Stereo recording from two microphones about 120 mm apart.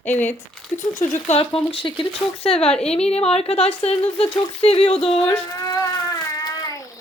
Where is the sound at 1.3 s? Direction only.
50° left (ahead or behind).